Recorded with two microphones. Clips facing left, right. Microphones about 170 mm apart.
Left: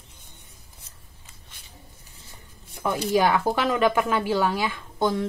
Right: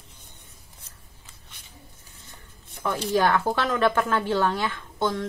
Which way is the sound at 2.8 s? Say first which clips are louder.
Left 1 dB; 10° left (ahead or behind).